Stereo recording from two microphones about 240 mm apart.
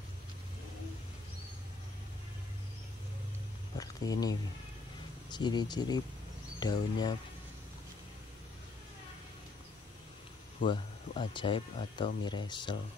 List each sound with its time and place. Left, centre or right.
3.7 s speech: centre
10.7 s speech: centre